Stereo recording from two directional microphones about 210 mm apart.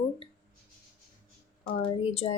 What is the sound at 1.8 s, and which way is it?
Speech, 25° left (ahead or behind).